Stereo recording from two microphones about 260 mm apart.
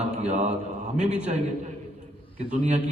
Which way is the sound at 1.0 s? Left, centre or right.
Centre.